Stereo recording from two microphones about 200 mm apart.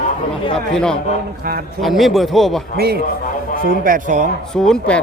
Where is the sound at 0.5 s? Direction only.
5° left (ahead or behind).